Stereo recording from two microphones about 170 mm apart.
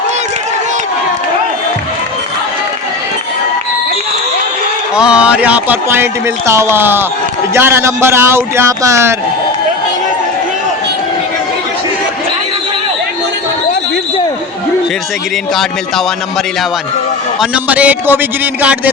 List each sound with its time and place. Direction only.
4.9 s speech: 5° right (ahead or behind)
17.4 s speech: 5° right (ahead or behind)